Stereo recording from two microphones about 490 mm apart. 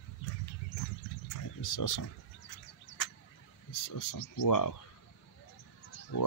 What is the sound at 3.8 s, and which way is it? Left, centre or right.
Speech, left.